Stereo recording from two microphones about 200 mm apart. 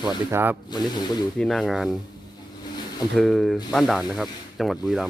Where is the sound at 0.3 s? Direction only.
10° right (ahead or behind).